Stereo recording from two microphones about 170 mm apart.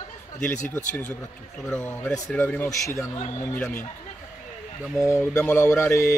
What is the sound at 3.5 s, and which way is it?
Mantra, 5° left (ahead or behind).